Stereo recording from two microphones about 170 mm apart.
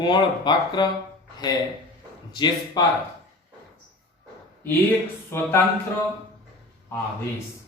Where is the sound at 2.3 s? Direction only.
25° left (ahead or behind).